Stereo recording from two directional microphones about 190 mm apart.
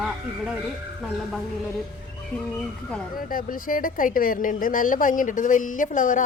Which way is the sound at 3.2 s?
50° left (ahead or behind).